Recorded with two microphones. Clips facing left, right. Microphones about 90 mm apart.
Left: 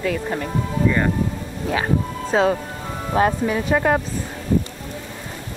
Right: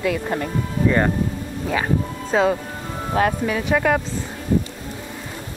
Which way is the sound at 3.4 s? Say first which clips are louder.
Left 1 dB; 20° left (ahead or behind).